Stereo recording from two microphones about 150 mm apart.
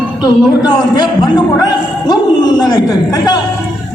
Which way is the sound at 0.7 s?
30° left (ahead or behind).